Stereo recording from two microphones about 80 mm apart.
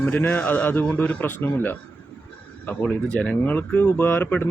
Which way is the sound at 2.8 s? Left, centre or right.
Centre.